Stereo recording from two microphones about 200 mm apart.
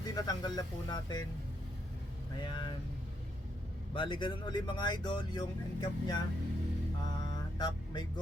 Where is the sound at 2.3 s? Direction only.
25° left (ahead or behind).